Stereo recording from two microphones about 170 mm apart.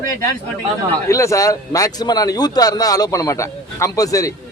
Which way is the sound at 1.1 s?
20° left (ahead or behind).